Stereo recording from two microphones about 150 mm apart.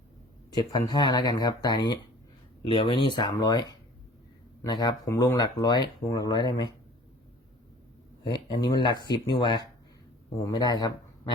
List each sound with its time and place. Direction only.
0.5 s speech: 30° left (ahead or behind)
8.2 s speech: 30° left (ahead or behind)